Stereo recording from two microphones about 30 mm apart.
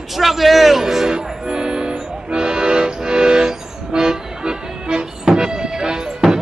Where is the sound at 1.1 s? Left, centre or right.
Right.